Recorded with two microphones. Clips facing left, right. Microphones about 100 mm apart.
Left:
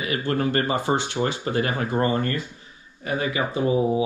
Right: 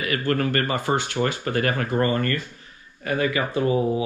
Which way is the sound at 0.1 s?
20° left (ahead or behind).